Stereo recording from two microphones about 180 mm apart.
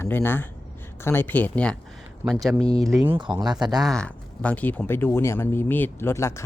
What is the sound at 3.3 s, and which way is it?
Speech, 25° right (ahead or behind).